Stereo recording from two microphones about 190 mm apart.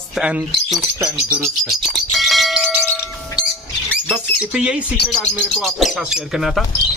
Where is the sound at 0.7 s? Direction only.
5° right (ahead or behind).